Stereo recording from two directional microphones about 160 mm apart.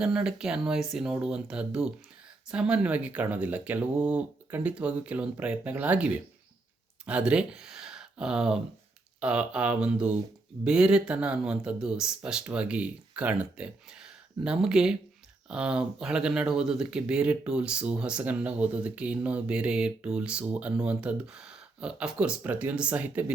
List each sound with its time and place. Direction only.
0.0 s speech: 5° right (ahead or behind)